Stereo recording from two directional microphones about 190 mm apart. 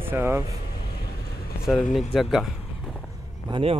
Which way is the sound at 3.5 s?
30° right (ahead or behind).